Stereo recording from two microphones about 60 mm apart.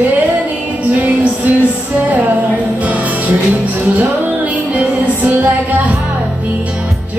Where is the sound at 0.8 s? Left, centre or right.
Right.